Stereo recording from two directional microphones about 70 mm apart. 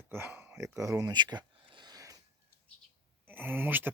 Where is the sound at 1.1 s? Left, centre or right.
Right.